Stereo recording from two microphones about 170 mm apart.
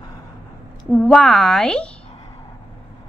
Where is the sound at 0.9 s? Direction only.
Centre (ahead or behind).